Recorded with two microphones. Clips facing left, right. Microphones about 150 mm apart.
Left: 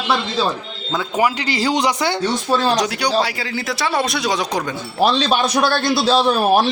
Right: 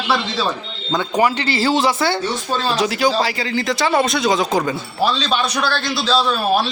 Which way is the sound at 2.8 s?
Centre (ahead or behind).